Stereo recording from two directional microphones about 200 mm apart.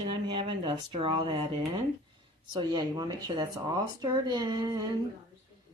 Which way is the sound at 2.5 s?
20° right (ahead or behind).